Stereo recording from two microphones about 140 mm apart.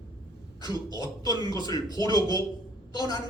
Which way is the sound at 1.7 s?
25° left (ahead or behind).